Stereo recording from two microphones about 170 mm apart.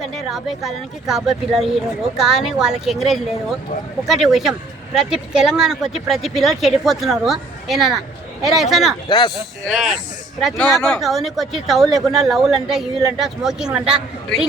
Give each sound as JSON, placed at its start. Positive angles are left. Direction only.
{"t": 0.0, "sound": "speech", "side_deg": 0}
{"t": 9.0, "sound": "speech", "side_deg": 25}
{"t": 9.7, "sound": "speech", "side_deg": 0}